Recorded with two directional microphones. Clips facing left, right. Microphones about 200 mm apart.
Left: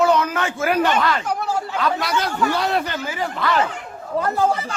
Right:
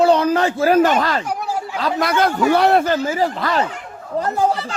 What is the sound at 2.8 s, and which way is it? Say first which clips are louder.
Speech: right 8 dB; 40° right (ahead or behind).